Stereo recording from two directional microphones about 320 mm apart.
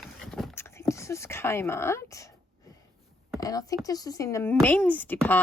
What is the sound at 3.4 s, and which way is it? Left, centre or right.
A woman's voice, centre.